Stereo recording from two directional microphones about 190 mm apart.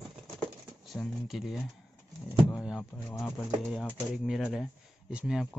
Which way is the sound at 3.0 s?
15° left (ahead or behind).